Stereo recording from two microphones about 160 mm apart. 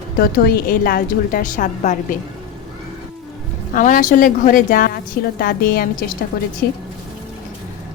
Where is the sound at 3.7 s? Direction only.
60° left (ahead or behind).